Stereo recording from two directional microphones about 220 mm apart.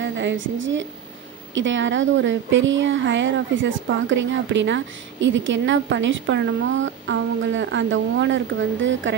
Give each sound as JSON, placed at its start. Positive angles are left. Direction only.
{"t": 0.0, "sound": "a woman's voice", "side_deg": -55}